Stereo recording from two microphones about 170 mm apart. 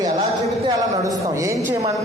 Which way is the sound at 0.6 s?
20° right (ahead or behind).